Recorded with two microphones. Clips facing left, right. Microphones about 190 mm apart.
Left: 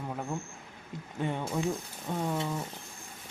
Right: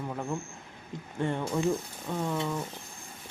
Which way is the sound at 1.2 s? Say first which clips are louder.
Right 3 dB; 5° left (ahead or behind).